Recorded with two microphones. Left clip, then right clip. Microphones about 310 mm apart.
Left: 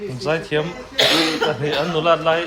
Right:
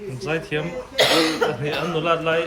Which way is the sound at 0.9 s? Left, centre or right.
Centre.